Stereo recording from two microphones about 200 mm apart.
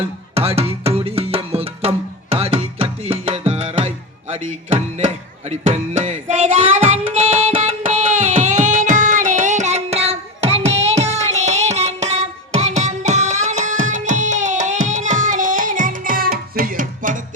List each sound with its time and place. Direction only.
0.3 s music: 30° right (ahead or behind)
5.5 s music: 35° right (ahead or behind)